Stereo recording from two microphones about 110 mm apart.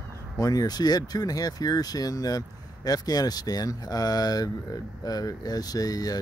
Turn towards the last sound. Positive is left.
turn(degrees=35)  # may be behind; listen again after turning